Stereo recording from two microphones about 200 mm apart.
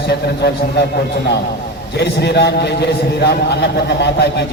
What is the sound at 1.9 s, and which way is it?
A man's voice, 55° left (ahead or behind).